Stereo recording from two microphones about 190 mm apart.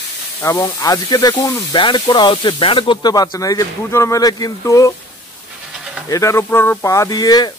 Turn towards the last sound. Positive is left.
turn(degrees=20)  # may be behind; listen again after turning